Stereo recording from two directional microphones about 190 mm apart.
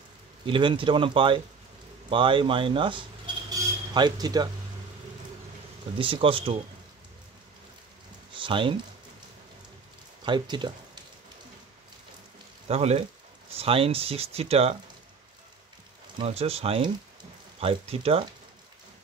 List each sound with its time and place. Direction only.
0.5 s speech: 25° right (ahead or behind)
5.9 s speech: 30° right (ahead or behind)
8.4 s speech: 25° right (ahead or behind)
10.2 s speech: 25° right (ahead or behind)
12.6 s speech: 35° right (ahead or behind)
16.2 s speech: 30° right (ahead or behind)